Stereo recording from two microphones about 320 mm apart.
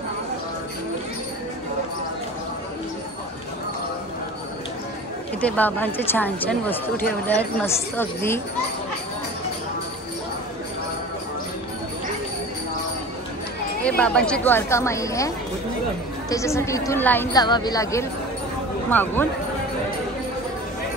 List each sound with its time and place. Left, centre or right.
5.4 s a woman's voice: centre
13.8 s a woman's voice: centre